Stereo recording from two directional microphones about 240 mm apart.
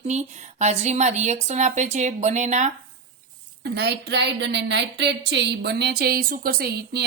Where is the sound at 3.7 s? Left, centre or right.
Right.